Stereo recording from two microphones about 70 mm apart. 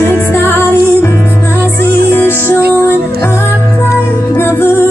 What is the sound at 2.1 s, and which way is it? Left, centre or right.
Music, left.